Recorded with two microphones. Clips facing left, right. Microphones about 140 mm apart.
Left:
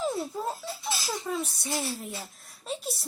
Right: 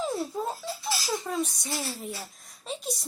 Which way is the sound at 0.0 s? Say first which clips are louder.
Even; centre (ahead or behind).